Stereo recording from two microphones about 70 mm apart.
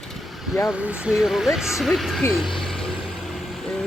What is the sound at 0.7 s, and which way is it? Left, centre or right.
Speech, centre.